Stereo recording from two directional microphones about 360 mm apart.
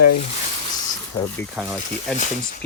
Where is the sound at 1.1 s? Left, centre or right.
Centre.